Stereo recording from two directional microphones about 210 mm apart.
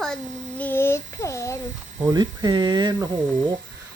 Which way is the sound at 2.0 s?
20° right (ahead or behind).